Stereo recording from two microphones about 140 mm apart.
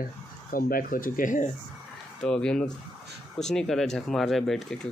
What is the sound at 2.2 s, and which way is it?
Speech, 5° left (ahead or behind).